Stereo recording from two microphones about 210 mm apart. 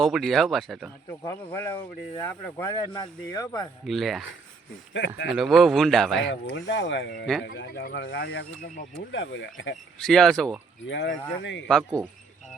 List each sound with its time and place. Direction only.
0.0 s speech: centre (ahead or behind)
1.2 s speech: 15° left (ahead or behind)
3.8 s speech: centre (ahead or behind)
4.9 s speech: 60° left (ahead or behind)
5.3 s speech: centre (ahead or behind)
6.1 s speech: 55° left (ahead or behind)
8.4 s speech: 40° left (ahead or behind)
9.1 s speech: 60° left (ahead or behind)
10.0 s speech: centre (ahead or behind)
10.8 s speech: 60° left (ahead or behind)
11.7 s speech: centre (ahead or behind)